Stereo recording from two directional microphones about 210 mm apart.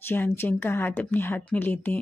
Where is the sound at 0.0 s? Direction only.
10° left (ahead or behind).